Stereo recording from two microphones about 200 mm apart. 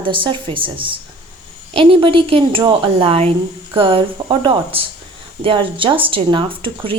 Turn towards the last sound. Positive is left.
turn(degrees=-25)  # may be behind; listen again after turning